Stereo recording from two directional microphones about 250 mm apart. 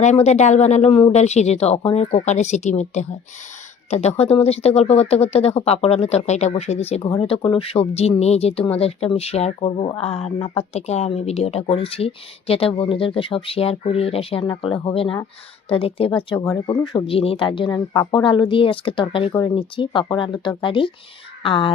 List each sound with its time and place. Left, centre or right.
0.0 s speech: left